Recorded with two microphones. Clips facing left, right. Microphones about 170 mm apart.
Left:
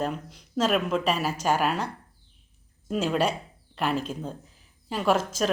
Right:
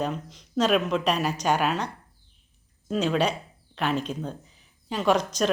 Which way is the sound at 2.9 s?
5° left (ahead or behind).